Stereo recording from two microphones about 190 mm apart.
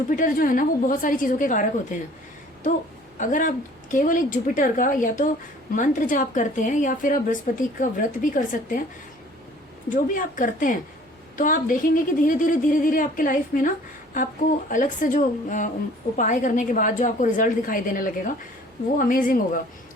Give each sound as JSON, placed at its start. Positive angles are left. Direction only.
{"t": 0.1, "sound": "speech", "side_deg": 45}
{"t": 3.2, "sound": "speech", "side_deg": 45}
{"t": 9.9, "sound": "speech", "side_deg": 45}